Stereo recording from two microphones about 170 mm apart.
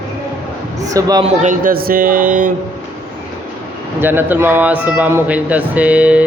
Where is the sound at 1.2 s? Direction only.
40° right (ahead or behind).